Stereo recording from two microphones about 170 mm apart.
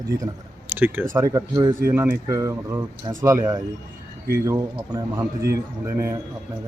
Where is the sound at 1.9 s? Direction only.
10° right (ahead or behind).